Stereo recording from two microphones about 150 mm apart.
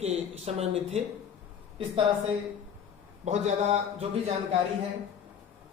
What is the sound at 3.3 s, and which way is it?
Speech, 50° right (ahead or behind).